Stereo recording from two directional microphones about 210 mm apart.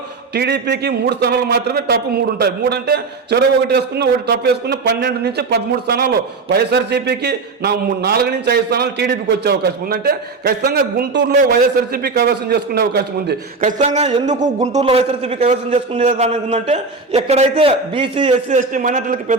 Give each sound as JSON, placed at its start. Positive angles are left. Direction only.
{"t": 0.3, "sound": "a man's voice", "side_deg": -50}
{"t": 18.4, "sound": "a man's voice", "side_deg": -35}